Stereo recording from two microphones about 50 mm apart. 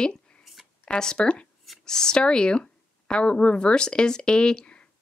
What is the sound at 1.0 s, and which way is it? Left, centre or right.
Speech, centre.